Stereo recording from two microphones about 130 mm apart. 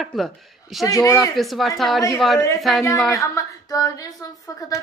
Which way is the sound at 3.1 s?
25° left (ahead or behind).